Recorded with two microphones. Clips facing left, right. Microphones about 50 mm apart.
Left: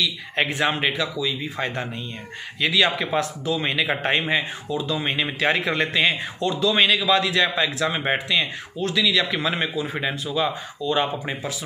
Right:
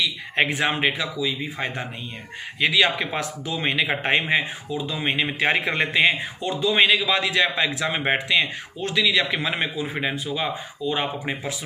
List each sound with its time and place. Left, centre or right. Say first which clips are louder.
0.6 s a man's voice: even; centre
10.9 s a man's voice: left 2 dB; centre